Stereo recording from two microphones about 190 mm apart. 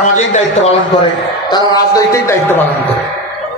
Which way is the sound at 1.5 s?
20° left (ahead or behind).